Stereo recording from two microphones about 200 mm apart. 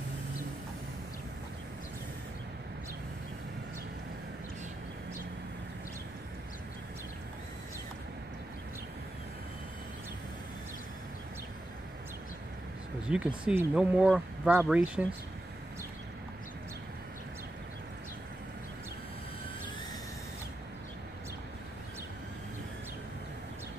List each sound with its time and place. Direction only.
13.1 s speech: 5° right (ahead or behind)